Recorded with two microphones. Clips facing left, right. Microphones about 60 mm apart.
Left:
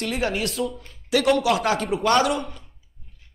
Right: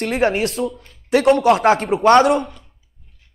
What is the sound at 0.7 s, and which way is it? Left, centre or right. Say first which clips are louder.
Speech: right 4 dB; centre.